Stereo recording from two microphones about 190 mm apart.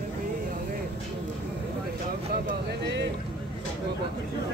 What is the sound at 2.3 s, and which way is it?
Vehicle, 60° right (ahead or behind).